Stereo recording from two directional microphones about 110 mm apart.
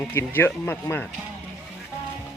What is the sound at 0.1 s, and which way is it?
Speech, 20° left (ahead or behind).